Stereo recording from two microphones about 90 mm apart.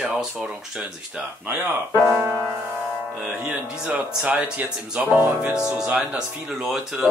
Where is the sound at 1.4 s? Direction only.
25° right (ahead or behind).